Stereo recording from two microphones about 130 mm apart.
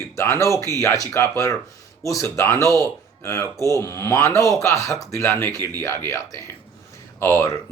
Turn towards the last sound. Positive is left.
turn(degrees=20)  # may be behind; listen again after turning